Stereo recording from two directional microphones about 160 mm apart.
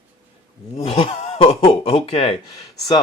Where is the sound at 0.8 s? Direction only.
35° left (ahead or behind).